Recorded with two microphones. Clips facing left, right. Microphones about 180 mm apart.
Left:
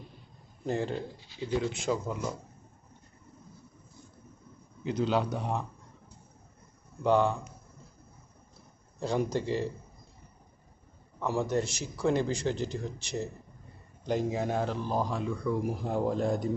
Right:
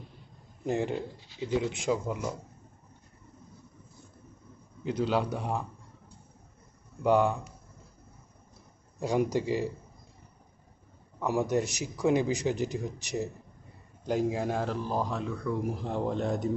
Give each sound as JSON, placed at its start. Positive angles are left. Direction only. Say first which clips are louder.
{"t": 0.6, "sound": "speech", "louder": "right 2 dB", "side_deg": -15}
{"t": 4.8, "sound": "speech", "louder": "even", "side_deg": 0}
{"t": 7.0, "sound": "speech", "louder": "right 1 dB", "side_deg": -5}
{"t": 9.0, "sound": "speech", "louder": "right 2 dB", "side_deg": -15}
{"t": 11.2, "sound": "speech", "louder": "right 2 dB", "side_deg": -15}
{"t": 14.1, "sound": "speech", "louder": "right 1 dB", "side_deg": -5}